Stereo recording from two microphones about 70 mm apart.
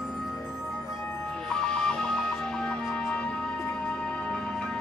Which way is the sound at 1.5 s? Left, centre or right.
Centre.